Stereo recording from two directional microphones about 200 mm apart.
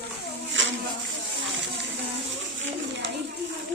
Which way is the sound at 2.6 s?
65° right (ahead or behind).